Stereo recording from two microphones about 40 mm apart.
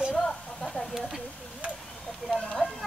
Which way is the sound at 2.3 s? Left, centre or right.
Centre.